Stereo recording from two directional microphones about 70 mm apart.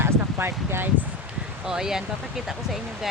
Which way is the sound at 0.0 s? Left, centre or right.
Right.